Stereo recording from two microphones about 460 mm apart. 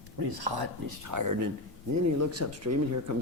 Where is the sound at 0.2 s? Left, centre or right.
Right.